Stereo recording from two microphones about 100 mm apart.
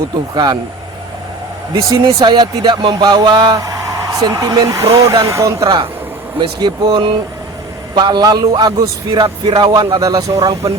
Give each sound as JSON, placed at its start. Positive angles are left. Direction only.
{"t": 0.3, "sound": "speech", "side_deg": -45}
{"t": 1.7, "sound": "speech", "side_deg": -35}
{"t": 2.2, "sound": "speech", "side_deg": -45}
{"t": 6.4, "sound": "speech", "side_deg": -50}